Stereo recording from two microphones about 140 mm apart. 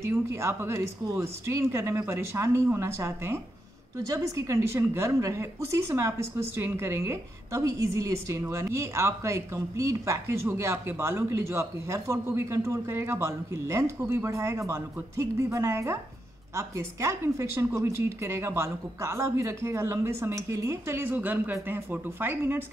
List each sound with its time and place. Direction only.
0.0 s a woman's voice: 20° right (ahead or behind)